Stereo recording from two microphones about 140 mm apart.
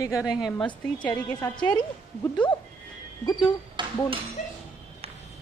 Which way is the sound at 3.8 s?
35° right (ahead or behind).